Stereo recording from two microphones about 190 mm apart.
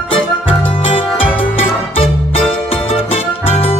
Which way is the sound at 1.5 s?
30° left (ahead or behind).